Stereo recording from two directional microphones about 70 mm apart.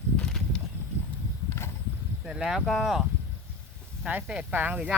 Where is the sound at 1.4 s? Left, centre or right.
Left.